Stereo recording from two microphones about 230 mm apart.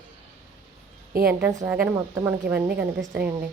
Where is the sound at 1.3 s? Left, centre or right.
Centre.